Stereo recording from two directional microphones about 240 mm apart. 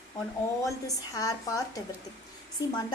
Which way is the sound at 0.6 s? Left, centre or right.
Centre.